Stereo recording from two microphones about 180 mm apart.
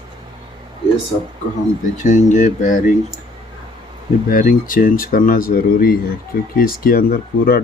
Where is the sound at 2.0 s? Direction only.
40° left (ahead or behind).